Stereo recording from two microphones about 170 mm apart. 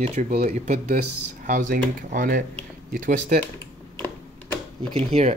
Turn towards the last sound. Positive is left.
turn(degrees=-35)  # may be behind; listen again after turning